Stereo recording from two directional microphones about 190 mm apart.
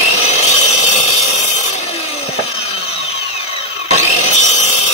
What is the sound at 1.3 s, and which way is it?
Sawing, 40° left (ahead or behind).